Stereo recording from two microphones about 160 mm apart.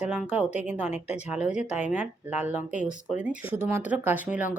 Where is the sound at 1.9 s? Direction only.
50° left (ahead or behind).